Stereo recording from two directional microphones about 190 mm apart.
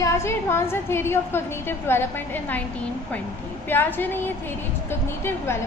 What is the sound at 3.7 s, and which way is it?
A woman's voice, 10° left (ahead or behind).